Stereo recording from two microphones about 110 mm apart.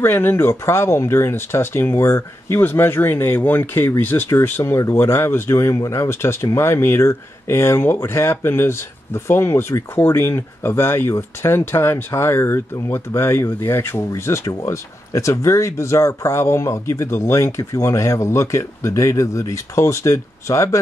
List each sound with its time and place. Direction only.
0.0 s speech: 20° left (ahead or behind)